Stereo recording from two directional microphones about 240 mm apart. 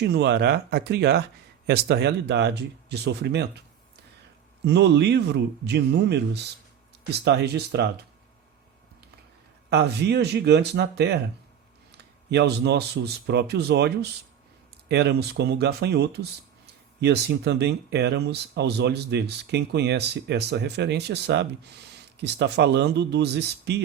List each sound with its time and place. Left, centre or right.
0.0 s speech: right
4.6 s speech: right
9.6 s speech: right